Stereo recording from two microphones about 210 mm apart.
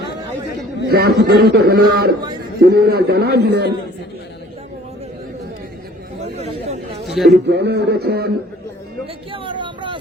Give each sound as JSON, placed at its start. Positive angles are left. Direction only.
{"t": 0.9, "sound": "a man's voice", "side_deg": -50}
{"t": 6.2, "sound": "chatter", "side_deg": -30}
{"t": 7.3, "sound": "a man's voice", "side_deg": -55}
{"t": 9.3, "sound": "a sound", "side_deg": -25}